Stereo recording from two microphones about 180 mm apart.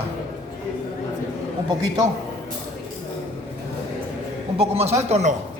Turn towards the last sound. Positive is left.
turn(degrees=-40)  # may be behind; listen again after turning